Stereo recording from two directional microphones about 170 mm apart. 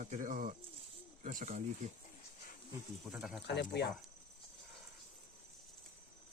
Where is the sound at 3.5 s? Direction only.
80° left.